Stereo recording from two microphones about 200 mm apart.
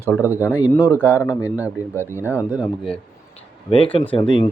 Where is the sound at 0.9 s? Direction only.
10° left (ahead or behind).